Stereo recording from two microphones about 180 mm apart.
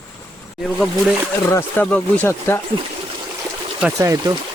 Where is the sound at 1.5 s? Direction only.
10° left (ahead or behind).